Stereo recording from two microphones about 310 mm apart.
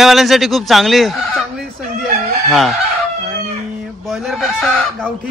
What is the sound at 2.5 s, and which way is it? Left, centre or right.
Fowl, centre.